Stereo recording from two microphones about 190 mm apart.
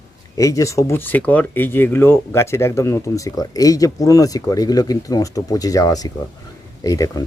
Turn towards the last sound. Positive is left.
turn(degrees=20)  # may be behind; listen again after turning